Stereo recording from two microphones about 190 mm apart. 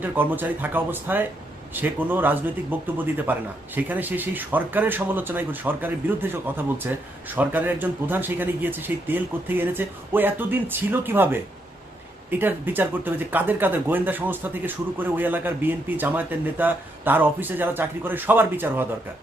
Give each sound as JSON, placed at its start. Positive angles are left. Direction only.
{"t": 0.0, "sound": "speech", "side_deg": -10}
{"t": 7.3, "sound": "speech", "side_deg": -10}